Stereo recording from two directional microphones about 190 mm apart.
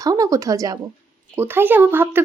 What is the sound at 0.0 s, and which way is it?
A woman's voice, 20° right (ahead or behind).